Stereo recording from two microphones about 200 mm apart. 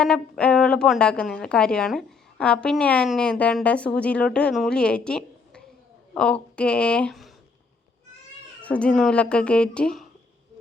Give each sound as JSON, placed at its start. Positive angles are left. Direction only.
{"t": 0.0, "sound": "speech", "side_deg": 5}
{"t": 8.6, "sound": "speech", "side_deg": 5}